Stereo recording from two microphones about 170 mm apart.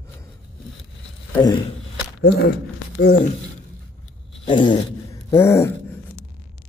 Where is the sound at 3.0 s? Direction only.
90° left.